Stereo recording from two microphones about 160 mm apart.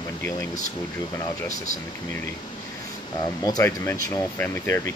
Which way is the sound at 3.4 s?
20° left (ahead or behind).